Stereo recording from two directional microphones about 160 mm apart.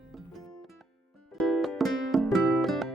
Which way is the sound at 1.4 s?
Centre (ahead or behind).